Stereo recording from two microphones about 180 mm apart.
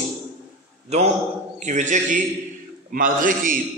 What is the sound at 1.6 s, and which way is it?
A man's voice, 45° right (ahead or behind).